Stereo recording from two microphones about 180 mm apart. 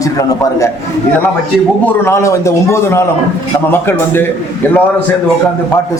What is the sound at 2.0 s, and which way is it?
A man's voice, 15° left (ahead or behind).